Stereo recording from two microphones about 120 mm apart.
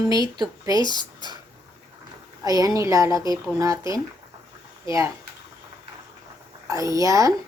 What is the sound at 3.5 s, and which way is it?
Speech, 25° right (ahead or behind).